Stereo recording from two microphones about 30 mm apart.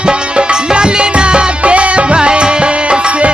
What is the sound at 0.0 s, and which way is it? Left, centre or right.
Music, right.